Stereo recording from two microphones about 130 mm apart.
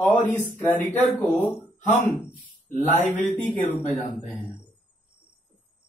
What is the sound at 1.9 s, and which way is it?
Speech, 15° left (ahead or behind).